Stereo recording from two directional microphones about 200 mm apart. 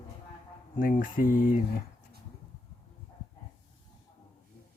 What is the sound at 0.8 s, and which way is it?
Mantra, 45° left (ahead or behind).